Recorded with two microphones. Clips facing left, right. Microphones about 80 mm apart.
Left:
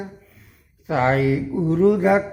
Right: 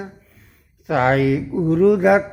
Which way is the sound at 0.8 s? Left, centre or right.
Right.